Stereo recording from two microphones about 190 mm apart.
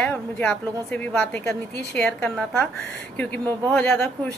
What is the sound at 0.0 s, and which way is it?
A woman's voice, 5° left (ahead or behind).